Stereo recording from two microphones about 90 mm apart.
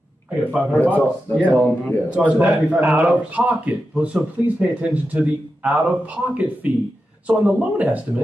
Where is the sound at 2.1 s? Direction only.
15° right (ahead or behind).